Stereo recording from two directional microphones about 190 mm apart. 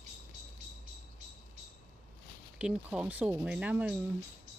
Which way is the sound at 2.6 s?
5° right (ahead or behind).